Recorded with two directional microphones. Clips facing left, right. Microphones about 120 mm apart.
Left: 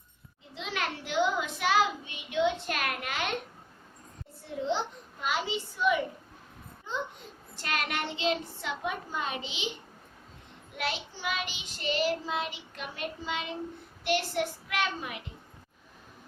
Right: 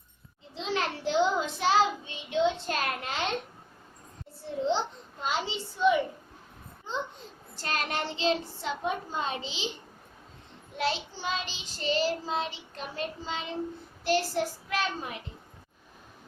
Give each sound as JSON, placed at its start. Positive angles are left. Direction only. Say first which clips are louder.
{"t": 0.5, "sound": "child singing", "louder": "right 4 dB", "side_deg": -30}
{"t": 5.2, "sound": "a sound", "louder": "even", "side_deg": -30}
{"t": 7.5, "sound": "a child's voice", "louder": "right 1 dB", "side_deg": -35}
{"t": 10.8, "sound": "child singing", "louder": "right 4 dB", "side_deg": -30}
{"t": 14.0, "sound": "a child's voice", "louder": "right 2 dB", "side_deg": -35}